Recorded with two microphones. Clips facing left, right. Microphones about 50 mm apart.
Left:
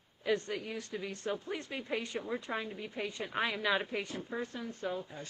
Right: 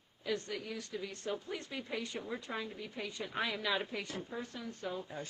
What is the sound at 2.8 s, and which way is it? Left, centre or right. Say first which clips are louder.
A woman's voice: left 3 dB; left.